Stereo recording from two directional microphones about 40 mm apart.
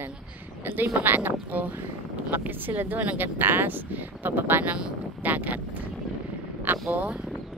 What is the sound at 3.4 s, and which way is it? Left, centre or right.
A woman's voice, right.